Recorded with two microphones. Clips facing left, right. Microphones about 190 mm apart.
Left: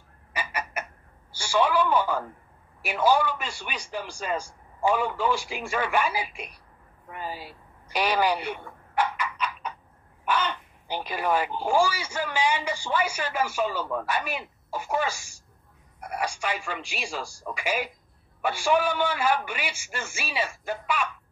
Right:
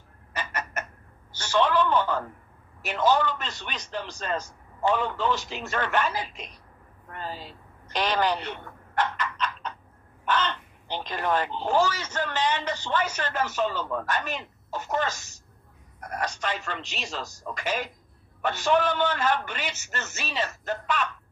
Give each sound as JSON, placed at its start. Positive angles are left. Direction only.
{"t": 0.3, "sound": "chicken", "side_deg": 10}
{"t": 1.3, "sound": "speech", "side_deg": 10}
{"t": 7.1, "sound": "a sound", "side_deg": 10}
{"t": 10.2, "sound": "speech", "side_deg": 10}